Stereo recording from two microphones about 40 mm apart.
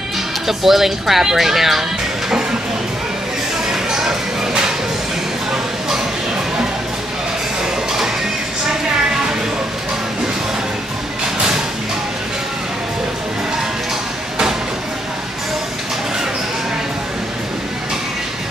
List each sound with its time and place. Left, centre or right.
0.5 s speech: centre
3.6 s music: centre